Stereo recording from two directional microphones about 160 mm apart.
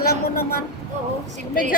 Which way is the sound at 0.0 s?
70° left (ahead or behind).